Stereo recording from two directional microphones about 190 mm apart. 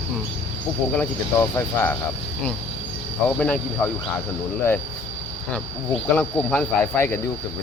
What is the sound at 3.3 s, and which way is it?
Speech, 5° left (ahead or behind).